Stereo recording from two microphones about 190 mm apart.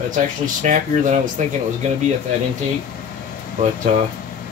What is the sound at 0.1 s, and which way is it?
Speech, 40° right (ahead or behind).